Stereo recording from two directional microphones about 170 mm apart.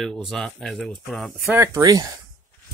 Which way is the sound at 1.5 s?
15° right (ahead or behind).